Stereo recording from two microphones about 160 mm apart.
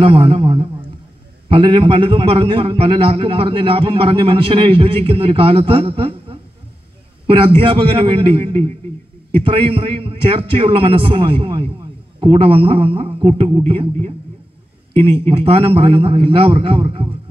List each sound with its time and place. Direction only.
0.0 s a man's voice: 35° right (ahead or behind)